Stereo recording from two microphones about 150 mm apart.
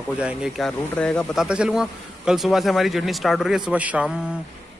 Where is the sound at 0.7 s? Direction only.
10° left (ahead or behind).